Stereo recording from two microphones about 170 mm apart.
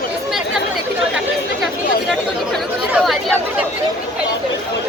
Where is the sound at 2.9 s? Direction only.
Centre (ahead or behind).